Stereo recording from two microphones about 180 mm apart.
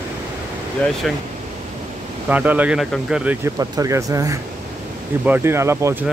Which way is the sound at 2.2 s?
10° right (ahead or behind).